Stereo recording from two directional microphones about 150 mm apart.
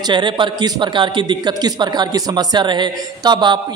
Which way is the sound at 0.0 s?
30° right (ahead or behind).